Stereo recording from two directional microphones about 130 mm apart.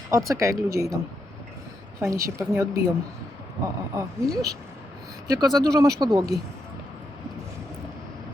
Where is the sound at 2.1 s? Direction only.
25° right (ahead or behind).